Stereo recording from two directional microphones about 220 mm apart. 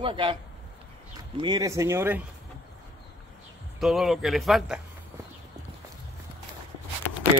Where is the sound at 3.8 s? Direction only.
Centre (ahead or behind).